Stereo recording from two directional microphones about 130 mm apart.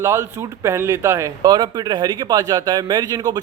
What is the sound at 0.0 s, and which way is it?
Speech, 20° right (ahead or behind).